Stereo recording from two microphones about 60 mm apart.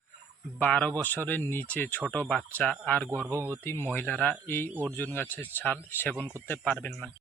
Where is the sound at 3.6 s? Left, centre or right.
Left.